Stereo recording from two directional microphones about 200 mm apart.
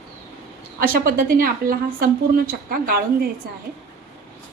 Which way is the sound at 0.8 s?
45° right (ahead or behind).